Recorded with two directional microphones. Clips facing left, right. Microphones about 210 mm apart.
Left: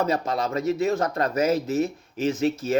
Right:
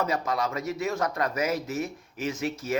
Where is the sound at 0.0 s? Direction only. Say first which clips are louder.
Left 3 dB; 30° left (ahead or behind).